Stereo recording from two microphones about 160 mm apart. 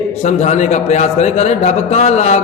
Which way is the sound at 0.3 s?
45° left (ahead or behind).